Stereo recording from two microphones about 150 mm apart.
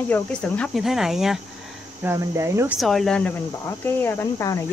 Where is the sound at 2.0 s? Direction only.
20° right (ahead or behind).